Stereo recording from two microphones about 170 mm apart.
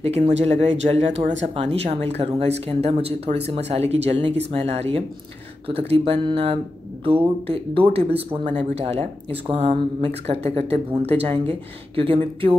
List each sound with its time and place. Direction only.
0.0 s speech: 40° right (ahead or behind)